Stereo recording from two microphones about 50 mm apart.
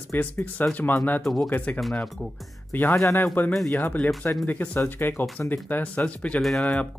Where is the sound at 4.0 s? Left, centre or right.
Centre.